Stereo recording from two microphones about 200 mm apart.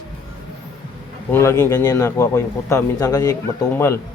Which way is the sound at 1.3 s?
15° left (ahead or behind).